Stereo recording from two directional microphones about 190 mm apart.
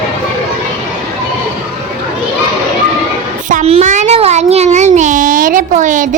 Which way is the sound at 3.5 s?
35° right (ahead or behind).